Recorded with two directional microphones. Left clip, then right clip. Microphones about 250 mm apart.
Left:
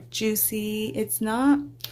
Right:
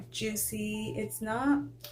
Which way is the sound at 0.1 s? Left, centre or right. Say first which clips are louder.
Left 9 dB; left.